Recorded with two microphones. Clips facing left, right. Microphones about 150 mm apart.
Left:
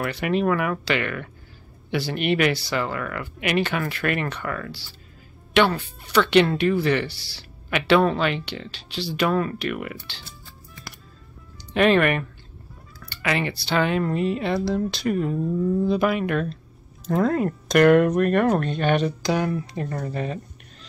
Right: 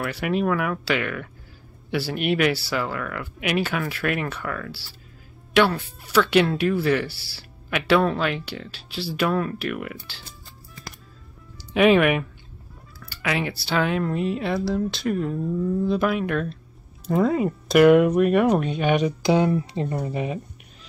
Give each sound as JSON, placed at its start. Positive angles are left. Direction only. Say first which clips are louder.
{"t": 0.0, "sound": "speech", "louder": "left 1 dB", "side_deg": -5}
{"t": 11.7, "sound": "speech", "louder": "right 1 dB", "side_deg": -5}
{"t": 19.2, "sound": "speech", "louder": "right 4 dB", "side_deg": -20}